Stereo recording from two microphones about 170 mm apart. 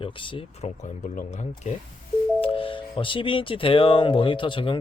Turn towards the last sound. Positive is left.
turn(degrees=30)  # may be behind; listen again after turning